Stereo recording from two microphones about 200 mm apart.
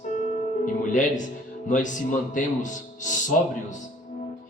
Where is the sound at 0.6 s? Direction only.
40° left (ahead or behind).